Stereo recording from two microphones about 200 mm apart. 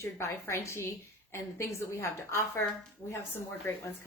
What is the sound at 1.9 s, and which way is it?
Speech, 10° left (ahead or behind).